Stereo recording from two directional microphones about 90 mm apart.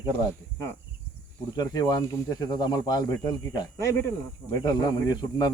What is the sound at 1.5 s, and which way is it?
Speech, 50° left (ahead or behind).